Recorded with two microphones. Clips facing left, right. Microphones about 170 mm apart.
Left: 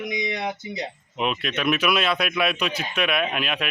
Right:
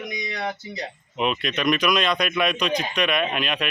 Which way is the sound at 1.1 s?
Centre (ahead or behind).